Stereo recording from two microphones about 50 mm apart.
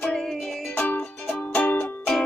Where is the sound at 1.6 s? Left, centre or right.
Left.